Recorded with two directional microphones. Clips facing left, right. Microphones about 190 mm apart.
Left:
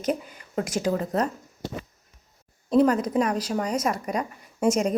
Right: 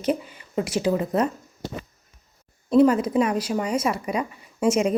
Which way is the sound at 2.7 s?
5° right (ahead or behind).